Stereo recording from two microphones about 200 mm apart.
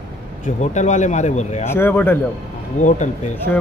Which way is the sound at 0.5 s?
35° left (ahead or behind).